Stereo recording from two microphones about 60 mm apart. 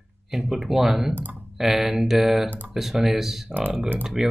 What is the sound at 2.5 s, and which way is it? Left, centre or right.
Speech, right.